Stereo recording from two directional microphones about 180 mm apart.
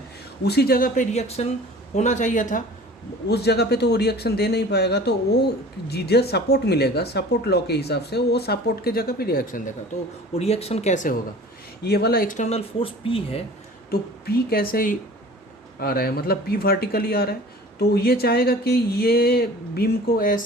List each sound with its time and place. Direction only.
0.4 s speech: 65° left (ahead or behind); by 2.6 s 45° left (ahead or behind)
3.2 s speech: 65° left (ahead or behind)
10.3 s speech: 35° left (ahead or behind)
11.8 s speech: 65° left (ahead or behind); by 13.4 s 30° left (ahead or behind)
13.9 s speech: 55° left (ahead or behind)